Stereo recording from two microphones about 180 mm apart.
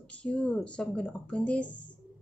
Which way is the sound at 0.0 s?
5° left (ahead or behind).